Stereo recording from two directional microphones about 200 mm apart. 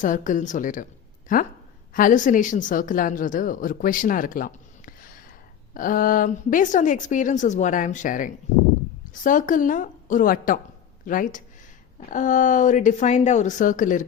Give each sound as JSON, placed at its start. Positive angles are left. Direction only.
{"t": 0.0, "sound": "a woman's voice", "side_deg": 40}